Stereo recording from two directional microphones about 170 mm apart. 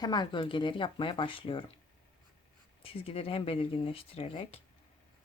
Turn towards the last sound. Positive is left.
turn(degrees=35)  # may be behind; listen again after turning